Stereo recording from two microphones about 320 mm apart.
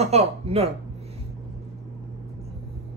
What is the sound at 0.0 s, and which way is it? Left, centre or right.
Speech, centre.